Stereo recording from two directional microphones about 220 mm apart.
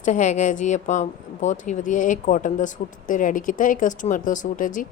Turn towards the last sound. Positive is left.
turn(degrees=35)  # may be behind; listen again after turning